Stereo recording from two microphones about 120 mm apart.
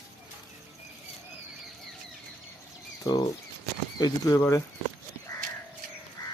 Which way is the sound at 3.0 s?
35° left (ahead or behind).